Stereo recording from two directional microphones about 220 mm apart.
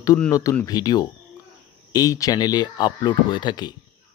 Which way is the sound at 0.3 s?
15° left (ahead or behind).